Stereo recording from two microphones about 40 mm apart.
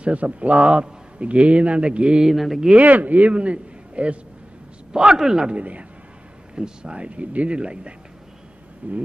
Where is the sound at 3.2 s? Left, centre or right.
Right.